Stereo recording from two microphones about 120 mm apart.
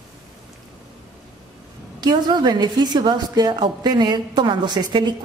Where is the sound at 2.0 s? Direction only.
35° right (ahead or behind).